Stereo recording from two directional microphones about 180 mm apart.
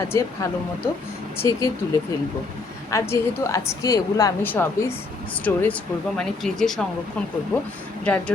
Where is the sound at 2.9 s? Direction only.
15° left (ahead or behind).